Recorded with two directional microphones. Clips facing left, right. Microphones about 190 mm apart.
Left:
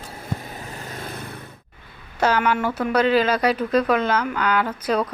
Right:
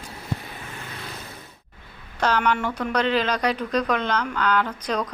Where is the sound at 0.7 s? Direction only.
40° left (ahead or behind).